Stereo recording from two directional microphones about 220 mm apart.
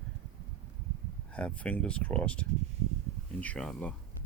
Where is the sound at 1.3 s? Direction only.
5° left (ahead or behind).